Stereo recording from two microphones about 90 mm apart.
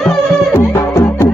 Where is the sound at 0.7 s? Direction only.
30° left (ahead or behind).